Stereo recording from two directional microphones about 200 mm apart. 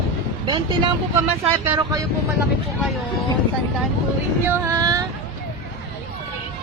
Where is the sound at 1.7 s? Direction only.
15° right (ahead or behind).